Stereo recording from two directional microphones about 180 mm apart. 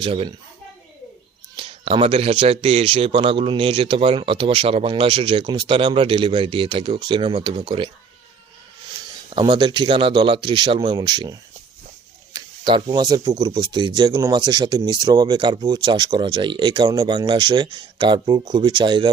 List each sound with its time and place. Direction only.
0.0 s speech: 30° right (ahead or behind)
1.5 s speech: 30° right (ahead or behind)
9.3 s speech: 25° right (ahead or behind)